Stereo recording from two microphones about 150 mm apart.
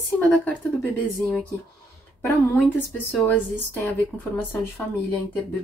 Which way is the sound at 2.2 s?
15° left (ahead or behind).